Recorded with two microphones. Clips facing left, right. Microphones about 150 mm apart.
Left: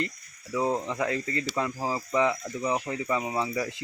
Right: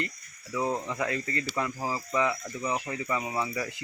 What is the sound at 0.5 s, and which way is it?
Speech, 20° left (ahead or behind).